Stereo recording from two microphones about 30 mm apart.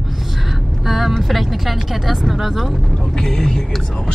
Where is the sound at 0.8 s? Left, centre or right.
Centre.